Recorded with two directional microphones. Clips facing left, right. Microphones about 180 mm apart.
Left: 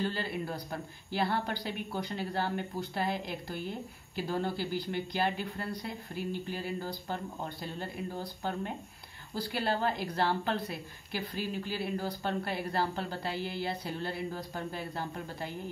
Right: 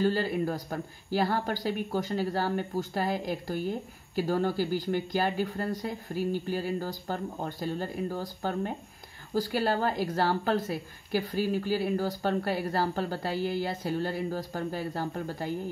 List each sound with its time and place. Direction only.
0.0 s a woman's voice: 40° right (ahead or behind)